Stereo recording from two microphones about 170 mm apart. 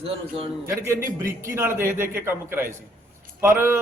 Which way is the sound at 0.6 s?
15° right (ahead or behind).